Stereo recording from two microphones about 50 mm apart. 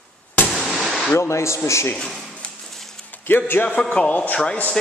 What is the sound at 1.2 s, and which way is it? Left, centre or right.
Speech, left.